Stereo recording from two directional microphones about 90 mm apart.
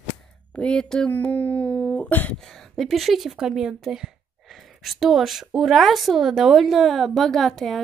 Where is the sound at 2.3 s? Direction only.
5° left (ahead or behind).